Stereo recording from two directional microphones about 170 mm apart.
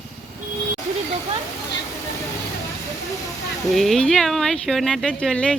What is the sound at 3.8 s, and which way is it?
Speech, centre (ahead or behind).